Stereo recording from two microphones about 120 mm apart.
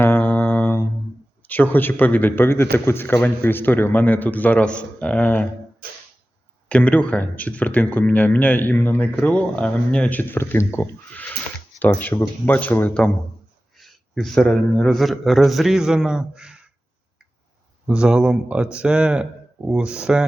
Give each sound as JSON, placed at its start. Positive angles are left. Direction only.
{"t": 0.0, "sound": "mantra", "side_deg": 15}
{"t": 1.5, "sound": "speech", "side_deg": 15}
{"t": 6.7, "sound": "speech", "side_deg": 10}
{"t": 12.1, "sound": "speech", "side_deg": 25}
{"t": 12.5, "sound": "a man's voice", "side_deg": 15}
{"t": 17.8, "sound": "speech", "side_deg": -5}